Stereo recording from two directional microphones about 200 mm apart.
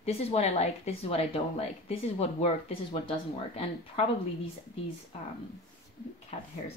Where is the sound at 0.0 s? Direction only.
30° left (ahead or behind).